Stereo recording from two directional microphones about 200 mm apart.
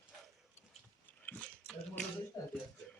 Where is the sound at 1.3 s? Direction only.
5° left (ahead or behind).